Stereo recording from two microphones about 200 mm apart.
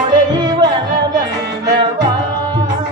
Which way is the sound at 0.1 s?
20° right (ahead or behind).